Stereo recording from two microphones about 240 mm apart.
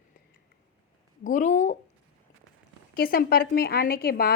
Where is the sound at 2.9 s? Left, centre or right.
Left.